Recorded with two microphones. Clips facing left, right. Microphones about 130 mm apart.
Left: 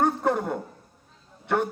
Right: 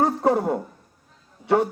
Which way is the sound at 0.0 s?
35° right (ahead or behind).